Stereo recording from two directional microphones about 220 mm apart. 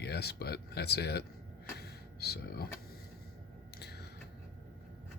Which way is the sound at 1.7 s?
45° left (ahead or behind).